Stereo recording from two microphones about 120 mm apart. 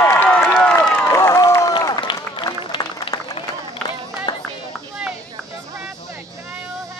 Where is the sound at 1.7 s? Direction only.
35° left (ahead or behind).